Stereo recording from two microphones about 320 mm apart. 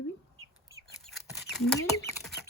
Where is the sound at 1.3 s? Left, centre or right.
Centre.